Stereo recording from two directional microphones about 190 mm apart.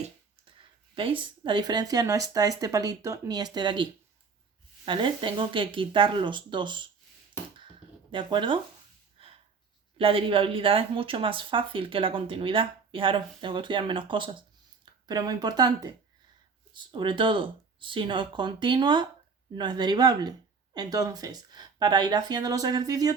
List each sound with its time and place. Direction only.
0.9 s speech: 25° right (ahead or behind)
4.9 s speech: 25° right (ahead or behind)
8.1 s speech: 25° right (ahead or behind)
9.2 s a sound: 30° right (ahead or behind)
10.0 s speech: 30° right (ahead or behind)